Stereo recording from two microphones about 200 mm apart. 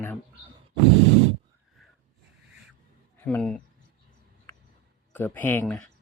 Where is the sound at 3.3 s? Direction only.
5° left (ahead or behind).